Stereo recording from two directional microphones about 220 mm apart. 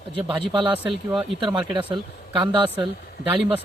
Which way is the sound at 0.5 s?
20° right (ahead or behind).